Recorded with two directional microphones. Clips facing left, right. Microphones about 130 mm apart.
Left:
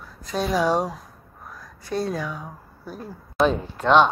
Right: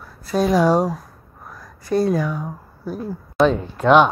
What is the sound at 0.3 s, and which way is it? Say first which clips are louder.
Speech: right 5 dB; 10° right (ahead or behind).